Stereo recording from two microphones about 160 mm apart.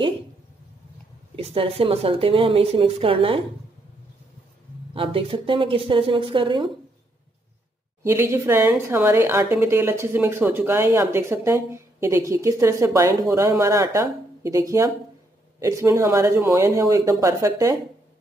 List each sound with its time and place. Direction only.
1.3 s a woman's voice: 35° right (ahead or behind)
4.9 s a woman's voice: 35° right (ahead or behind)
8.0 s a woman's voice: 15° right (ahead or behind)